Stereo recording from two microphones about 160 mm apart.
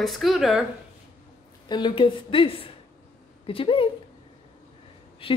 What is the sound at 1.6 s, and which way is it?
A woman's voice, 30° left (ahead or behind).